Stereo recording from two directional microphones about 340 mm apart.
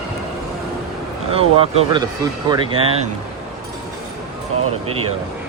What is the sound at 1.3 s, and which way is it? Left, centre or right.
Speech, centre.